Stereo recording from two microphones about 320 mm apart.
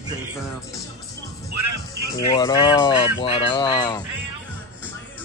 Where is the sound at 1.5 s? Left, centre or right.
Right.